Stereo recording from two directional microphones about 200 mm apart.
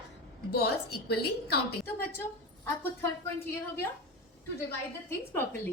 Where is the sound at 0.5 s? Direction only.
55° left (ahead or behind).